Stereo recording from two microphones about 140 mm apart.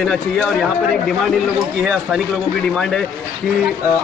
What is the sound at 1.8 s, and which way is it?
Speech, centre (ahead or behind).